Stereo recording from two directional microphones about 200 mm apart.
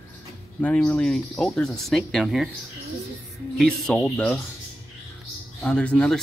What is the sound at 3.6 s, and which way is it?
Speech, 5° left (ahead or behind).